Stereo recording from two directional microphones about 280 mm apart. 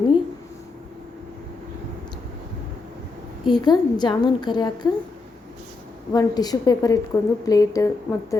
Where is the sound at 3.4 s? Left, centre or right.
Centre.